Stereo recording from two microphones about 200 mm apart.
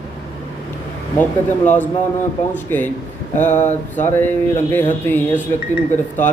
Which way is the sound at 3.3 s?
35° left (ahead or behind).